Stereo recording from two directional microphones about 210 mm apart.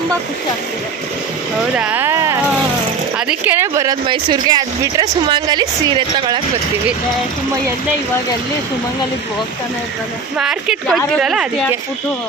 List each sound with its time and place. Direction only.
1.8 s a sound: 10° right (ahead or behind)
3.2 s speech: 5° right (ahead or behind)
10.3 s speech: 5° right (ahead or behind)